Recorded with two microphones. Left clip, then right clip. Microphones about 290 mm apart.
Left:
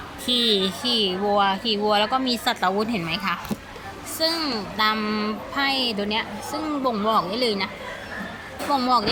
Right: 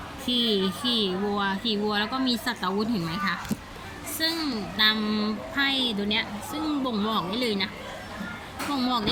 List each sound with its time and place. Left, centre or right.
0.3 s speech: centre
8.8 s speech: centre